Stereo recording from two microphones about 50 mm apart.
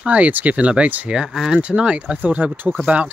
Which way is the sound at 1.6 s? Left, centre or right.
Right.